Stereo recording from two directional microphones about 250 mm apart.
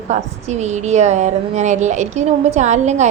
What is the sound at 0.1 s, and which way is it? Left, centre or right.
A woman's voice, right.